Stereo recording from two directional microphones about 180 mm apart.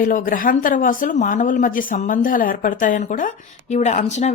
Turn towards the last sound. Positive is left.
turn(degrees=40)  # may be behind; listen again after turning